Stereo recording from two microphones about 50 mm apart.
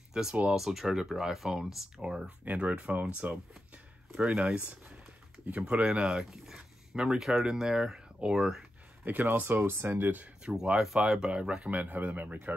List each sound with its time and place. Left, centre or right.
0.1 s speech: centre
2.4 s speech: right
4.1 s speech: centre
4.4 s speech: right
9.0 s speech: right
9.7 s speech: right
10.4 s speech: right
11.1 s speech: centre
11.3 s speech: right
11.7 s speech: right